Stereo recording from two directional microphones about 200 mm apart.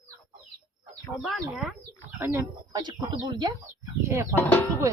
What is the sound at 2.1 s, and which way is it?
Speech, 15° right (ahead or behind).